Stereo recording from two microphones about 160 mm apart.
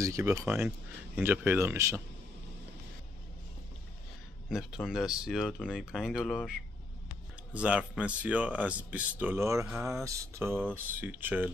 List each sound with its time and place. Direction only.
0.0 s speech: 20° right (ahead or behind)
0.5 s speech: 10° right (ahead or behind)
4.5 s speech: centre (ahead or behind)